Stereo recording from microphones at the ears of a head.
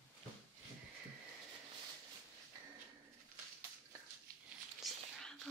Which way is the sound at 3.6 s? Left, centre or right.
Right.